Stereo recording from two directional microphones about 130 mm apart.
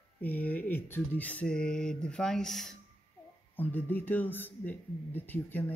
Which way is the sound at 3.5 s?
15° left (ahead or behind).